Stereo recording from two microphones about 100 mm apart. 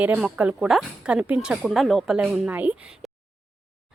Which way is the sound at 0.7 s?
5° right (ahead or behind).